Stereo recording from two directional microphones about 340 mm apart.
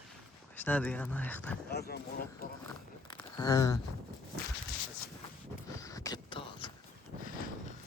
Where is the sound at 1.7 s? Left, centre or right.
Left.